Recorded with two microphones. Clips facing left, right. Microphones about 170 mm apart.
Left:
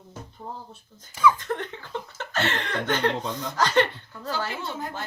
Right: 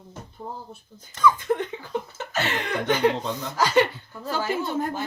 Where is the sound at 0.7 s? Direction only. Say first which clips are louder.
Right 3 dB; 10° right (ahead or behind).